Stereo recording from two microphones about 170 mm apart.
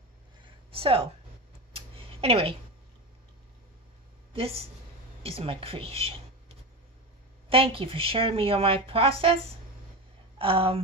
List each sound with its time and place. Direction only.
0.7 s a woman's voice: 35° right (ahead or behind)
1.7 s a sound: 35° right (ahead or behind)
4.3 s a woman's voice: 35° right (ahead or behind)
10.4 s speech: 35° right (ahead or behind)